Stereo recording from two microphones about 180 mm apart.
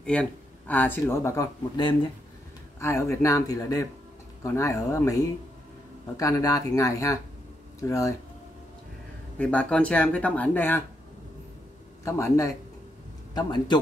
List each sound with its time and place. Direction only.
0.0 s speech: 5° left (ahead or behind)
9.4 s speech: 5° left (ahead or behind)
12.0 s a man's voice: 15° left (ahead or behind)